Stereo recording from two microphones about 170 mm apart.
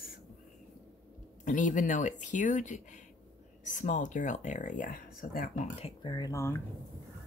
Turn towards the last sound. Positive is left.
turn(degrees=15)  # may be behind; listen again after turning